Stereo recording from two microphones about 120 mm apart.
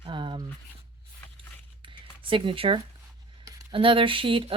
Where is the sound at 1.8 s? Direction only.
45° right (ahead or behind).